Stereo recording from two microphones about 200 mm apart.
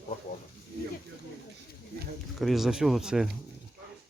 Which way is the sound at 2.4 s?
Centre (ahead or behind).